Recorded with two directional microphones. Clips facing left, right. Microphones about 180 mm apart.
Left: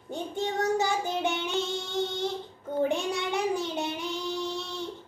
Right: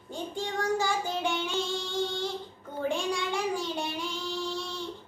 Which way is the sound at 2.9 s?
20° left (ahead or behind).